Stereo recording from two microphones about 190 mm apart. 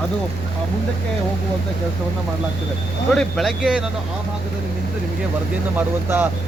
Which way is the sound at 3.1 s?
Centre (ahead or behind).